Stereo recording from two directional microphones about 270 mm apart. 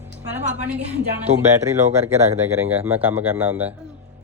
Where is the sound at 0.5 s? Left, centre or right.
Centre.